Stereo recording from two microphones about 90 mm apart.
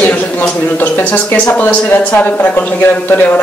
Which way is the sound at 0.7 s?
20° left (ahead or behind).